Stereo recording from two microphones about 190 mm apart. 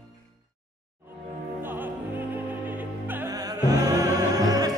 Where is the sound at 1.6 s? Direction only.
10° right (ahead or behind).